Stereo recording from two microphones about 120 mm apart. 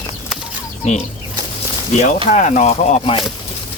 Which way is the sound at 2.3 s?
80° left.